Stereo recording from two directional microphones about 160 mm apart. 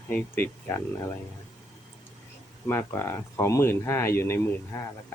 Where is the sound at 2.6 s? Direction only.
15° left (ahead or behind).